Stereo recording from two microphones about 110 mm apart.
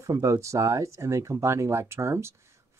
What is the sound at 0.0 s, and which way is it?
Speech, 30° right (ahead or behind).